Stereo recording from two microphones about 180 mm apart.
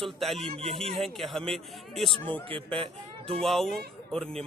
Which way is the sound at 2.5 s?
30° right (ahead or behind).